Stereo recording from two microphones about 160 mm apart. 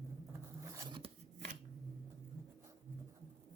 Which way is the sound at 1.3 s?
50° right (ahead or behind).